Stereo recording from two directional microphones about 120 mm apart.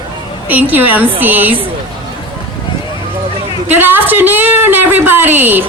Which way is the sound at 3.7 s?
15° right (ahead or behind).